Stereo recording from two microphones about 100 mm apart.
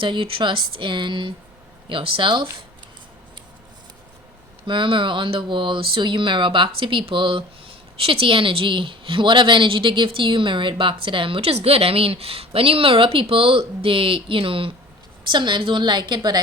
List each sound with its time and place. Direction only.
0.0 s a woman's voice: 60° right (ahead or behind)
4.6 s a woman's voice: 55° right (ahead or behind)
7.9 s a woman's voice: 65° right (ahead or behind)
15.3 s a woman's voice: 50° right (ahead or behind)